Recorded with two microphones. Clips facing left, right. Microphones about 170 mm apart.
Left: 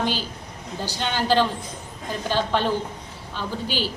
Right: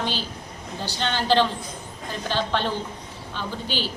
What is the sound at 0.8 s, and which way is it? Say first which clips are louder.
A woman's voice: even; 10° left (ahead or behind).